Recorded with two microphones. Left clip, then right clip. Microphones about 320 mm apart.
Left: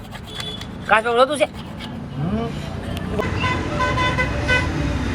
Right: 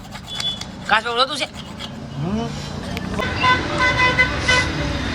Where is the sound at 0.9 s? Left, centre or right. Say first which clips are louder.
Left 2 dB; centre.